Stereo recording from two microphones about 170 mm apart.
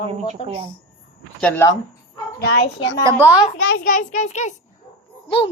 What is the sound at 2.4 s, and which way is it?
Speech, 85° left.